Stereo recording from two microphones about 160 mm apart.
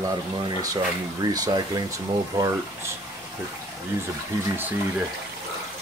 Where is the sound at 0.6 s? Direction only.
20° right (ahead or behind).